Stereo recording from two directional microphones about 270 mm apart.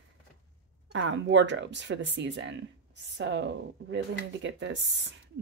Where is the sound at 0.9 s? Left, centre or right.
Right.